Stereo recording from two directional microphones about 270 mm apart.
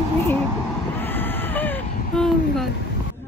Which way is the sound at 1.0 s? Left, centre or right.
Centre.